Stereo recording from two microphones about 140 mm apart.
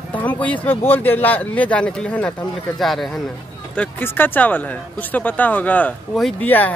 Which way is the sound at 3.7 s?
10° left (ahead or behind).